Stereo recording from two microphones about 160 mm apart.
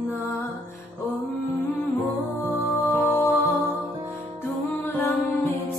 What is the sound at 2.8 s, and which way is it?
Music, 20° left (ahead or behind).